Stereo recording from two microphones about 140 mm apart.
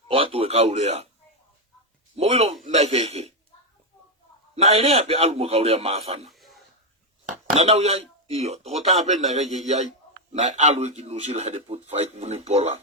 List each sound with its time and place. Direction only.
0.1 s a man's voice: 40° right (ahead or behind)
2.1 s a man's voice: 50° right (ahead or behind)
4.5 s a man's voice: 45° right (ahead or behind)
6.2 s throat clearing: centre (ahead or behind)
7.5 s a man's voice: 45° right (ahead or behind)